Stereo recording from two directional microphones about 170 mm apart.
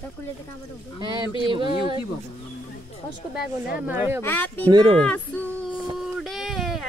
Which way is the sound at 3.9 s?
10° right (ahead or behind).